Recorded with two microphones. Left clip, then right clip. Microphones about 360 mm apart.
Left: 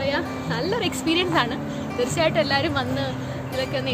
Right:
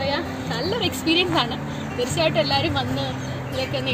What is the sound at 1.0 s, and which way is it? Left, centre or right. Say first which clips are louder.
Speech: right 4 dB; centre.